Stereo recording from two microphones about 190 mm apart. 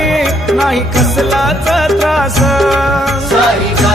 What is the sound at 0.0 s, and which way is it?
Music, centre (ahead or behind).